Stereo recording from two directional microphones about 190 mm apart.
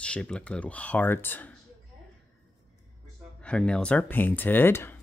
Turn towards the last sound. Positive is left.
turn(degrees=10)  # may be behind; listen again after turning